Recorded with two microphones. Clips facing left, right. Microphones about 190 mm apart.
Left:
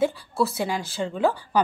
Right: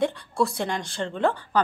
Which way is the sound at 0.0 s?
5° left (ahead or behind).